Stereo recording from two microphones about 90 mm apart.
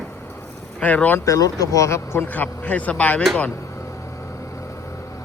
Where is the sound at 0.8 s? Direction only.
15° left (ahead or behind).